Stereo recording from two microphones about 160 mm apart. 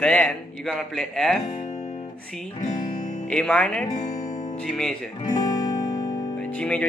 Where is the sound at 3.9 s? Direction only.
50° left (ahead or behind).